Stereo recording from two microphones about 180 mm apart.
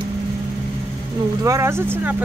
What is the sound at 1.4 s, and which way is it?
Speech, 15° right (ahead or behind).